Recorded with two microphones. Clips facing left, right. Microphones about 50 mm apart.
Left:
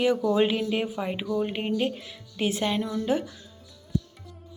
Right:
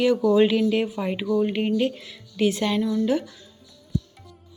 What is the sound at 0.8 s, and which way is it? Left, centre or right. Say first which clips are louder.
Speech: right 3 dB; centre.